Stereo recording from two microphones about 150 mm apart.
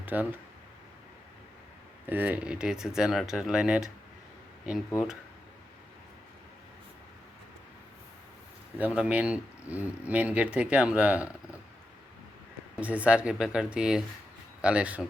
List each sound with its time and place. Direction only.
0.0 s speech: 10° right (ahead or behind)
2.0 s speech: 10° right (ahead or behind)
8.8 s speech: 10° right (ahead or behind)
12.8 s speech: 10° right (ahead or behind)